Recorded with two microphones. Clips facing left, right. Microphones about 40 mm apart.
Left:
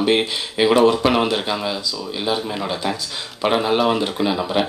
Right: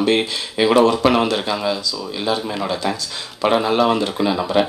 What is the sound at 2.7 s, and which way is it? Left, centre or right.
Speech, centre.